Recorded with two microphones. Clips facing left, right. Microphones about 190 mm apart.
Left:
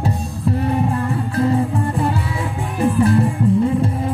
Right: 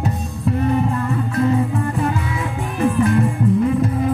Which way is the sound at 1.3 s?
30° left (ahead or behind).